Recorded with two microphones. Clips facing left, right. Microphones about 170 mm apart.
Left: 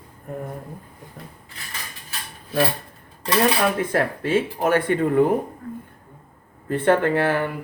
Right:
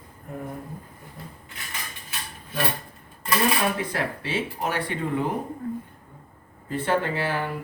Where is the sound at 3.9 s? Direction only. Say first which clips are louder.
Left 8 dB; 50° left (ahead or behind).